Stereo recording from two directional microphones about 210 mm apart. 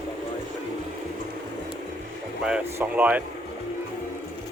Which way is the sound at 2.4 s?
5° right (ahead or behind).